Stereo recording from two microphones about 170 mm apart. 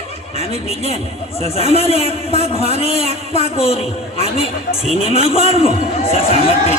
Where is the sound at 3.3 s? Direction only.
35° left (ahead or behind).